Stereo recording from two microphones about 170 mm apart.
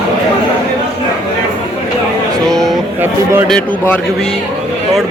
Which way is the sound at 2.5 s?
Centre (ahead or behind).